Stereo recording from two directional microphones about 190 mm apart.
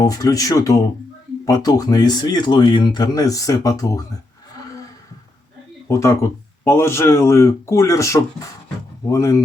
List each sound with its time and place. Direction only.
0.0 s speech: 20° left (ahead or behind)
5.9 s speech: 15° left (ahead or behind)